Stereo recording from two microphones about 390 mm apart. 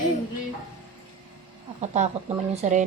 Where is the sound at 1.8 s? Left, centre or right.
Centre.